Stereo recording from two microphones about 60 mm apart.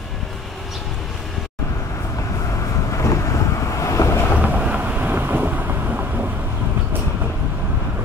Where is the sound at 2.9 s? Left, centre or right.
Left.